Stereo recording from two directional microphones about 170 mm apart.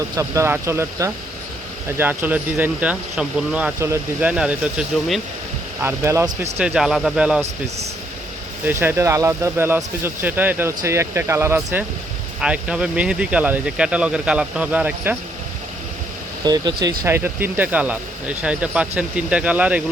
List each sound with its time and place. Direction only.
0.2 s speech: 15° right (ahead or behind)
5.8 s speech: 15° right (ahead or behind)
6.6 s speech: 5° right (ahead or behind)
8.8 s speech: 15° right (ahead or behind)
16.4 s speech: 25° right (ahead or behind)